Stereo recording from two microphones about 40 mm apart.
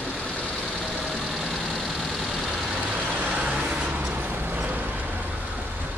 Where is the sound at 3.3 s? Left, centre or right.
Right.